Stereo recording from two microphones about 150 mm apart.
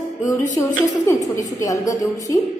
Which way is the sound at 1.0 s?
20° left (ahead or behind).